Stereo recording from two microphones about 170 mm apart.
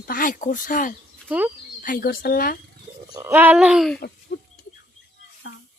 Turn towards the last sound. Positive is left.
turn(degrees=90)